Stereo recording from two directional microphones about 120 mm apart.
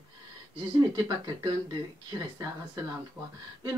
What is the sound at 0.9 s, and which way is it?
Speech, 35° right (ahead or behind).